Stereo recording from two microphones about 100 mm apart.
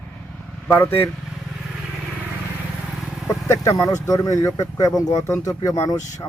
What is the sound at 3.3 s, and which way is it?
Speech, 30° left (ahead or behind).